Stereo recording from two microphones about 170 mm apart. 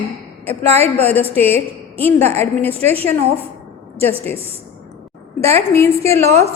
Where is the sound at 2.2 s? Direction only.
40° right (ahead or behind).